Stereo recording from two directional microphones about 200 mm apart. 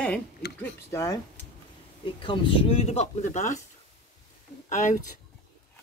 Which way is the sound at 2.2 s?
25° left (ahead or behind).